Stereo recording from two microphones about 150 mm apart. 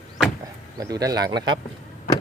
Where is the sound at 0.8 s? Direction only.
25° right (ahead or behind).